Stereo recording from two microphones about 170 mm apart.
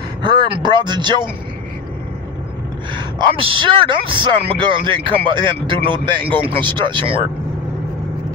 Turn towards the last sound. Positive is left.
turn(degrees=-30)  # may be behind; listen again after turning